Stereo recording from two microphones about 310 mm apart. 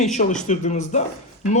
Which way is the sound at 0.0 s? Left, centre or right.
Left.